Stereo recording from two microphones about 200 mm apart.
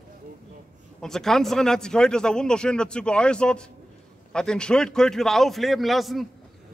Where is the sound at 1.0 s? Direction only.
Centre (ahead or behind).